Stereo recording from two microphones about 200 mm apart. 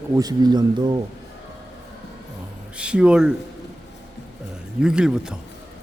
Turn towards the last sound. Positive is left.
turn(degrees=-5)  # may be behind; listen again after turning